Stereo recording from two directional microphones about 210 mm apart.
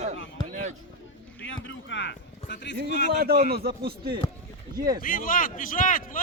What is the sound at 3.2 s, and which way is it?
Speech, 45° right (ahead or behind).